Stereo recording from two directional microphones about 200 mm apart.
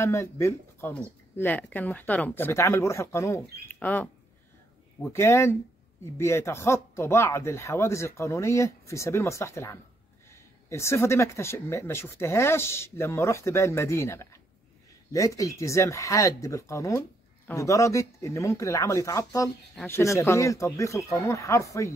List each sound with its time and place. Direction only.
0.0 s speech: 15° left (ahead or behind)